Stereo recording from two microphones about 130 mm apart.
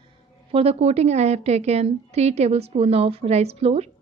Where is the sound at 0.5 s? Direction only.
50° right (ahead or behind).